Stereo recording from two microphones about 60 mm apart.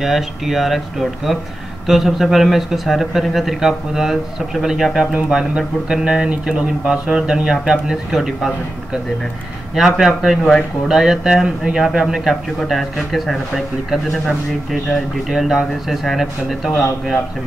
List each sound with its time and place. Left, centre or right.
0.0 s a man's voice: centre
1.9 s a man's voice: centre
5.1 s mantra: centre
9.8 s a man's voice: centre
15.2 s a man's voice: centre